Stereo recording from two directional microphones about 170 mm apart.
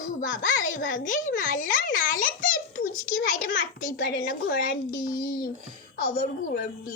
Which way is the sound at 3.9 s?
60° left (ahead or behind).